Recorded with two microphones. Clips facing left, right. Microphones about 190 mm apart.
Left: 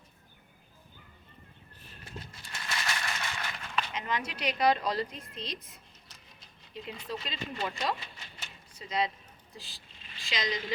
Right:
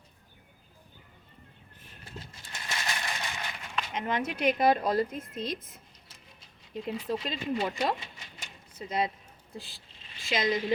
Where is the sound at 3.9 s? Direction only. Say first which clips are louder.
Right 4 dB; 50° right (ahead or behind).